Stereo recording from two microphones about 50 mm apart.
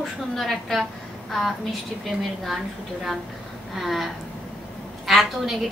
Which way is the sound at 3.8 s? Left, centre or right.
Centre.